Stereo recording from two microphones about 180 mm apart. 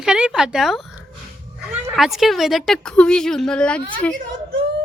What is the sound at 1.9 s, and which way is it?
A woman's voice, centre (ahead or behind).